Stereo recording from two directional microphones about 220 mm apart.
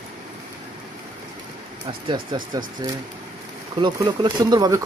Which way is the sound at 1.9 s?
20° right (ahead or behind).